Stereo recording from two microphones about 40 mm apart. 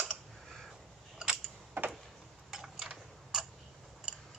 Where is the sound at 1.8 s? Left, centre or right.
Right.